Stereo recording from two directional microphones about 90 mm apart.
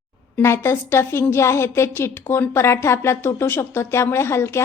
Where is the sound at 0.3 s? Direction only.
30° left (ahead or behind).